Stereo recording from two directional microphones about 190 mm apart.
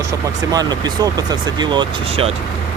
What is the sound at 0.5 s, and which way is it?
Speech, 20° right (ahead or behind).